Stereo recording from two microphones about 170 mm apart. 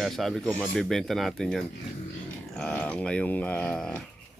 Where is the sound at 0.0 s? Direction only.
Centre (ahead or behind).